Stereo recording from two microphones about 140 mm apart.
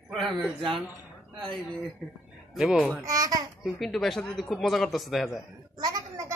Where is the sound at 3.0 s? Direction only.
25° right (ahead or behind).